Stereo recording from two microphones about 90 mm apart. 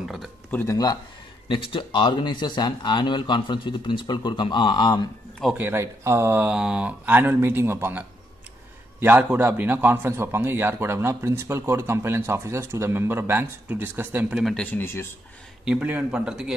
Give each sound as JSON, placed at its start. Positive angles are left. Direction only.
{"t": 0.7, "sound": "speech", "side_deg": 45}
{"t": 1.5, "sound": "speech", "side_deg": 70}
{"t": 5.6, "sound": "a man's voice", "side_deg": -30}
{"t": 6.4, "sound": "a man's voice", "side_deg": -10}
{"t": 9.0, "sound": "a man's voice", "side_deg": -20}
{"t": 14.5, "sound": "speech", "side_deg": 15}
{"t": 15.6, "sound": "a man's voice", "side_deg": -15}